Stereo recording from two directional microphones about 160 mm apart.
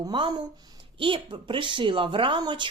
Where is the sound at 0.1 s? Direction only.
30° right (ahead or behind).